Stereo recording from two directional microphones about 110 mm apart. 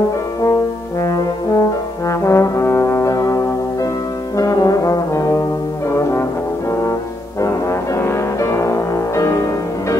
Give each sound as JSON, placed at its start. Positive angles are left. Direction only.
{"t": 1.0, "sound": "brass instrument", "side_deg": 30}
{"t": 7.4, "sound": "music", "side_deg": 25}